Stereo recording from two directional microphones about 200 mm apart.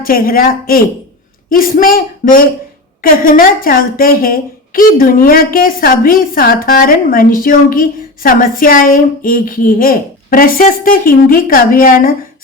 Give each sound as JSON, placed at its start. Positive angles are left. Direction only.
{"t": 0.0, "sound": "speech", "side_deg": 45}